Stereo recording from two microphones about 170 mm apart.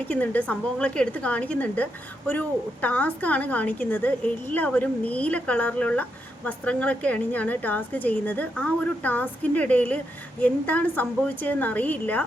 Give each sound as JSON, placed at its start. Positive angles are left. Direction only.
{"t": 0.0, "sound": "a woman's voice", "side_deg": 10}